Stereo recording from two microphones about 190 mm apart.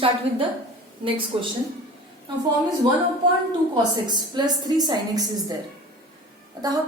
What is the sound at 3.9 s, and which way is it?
A woman's voice, 25° right (ahead or behind).